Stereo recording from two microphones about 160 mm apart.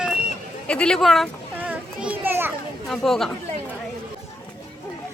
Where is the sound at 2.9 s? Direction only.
Centre (ahead or behind).